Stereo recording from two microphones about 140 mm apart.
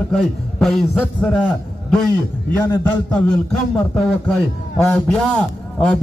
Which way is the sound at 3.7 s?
10° left (ahead or behind).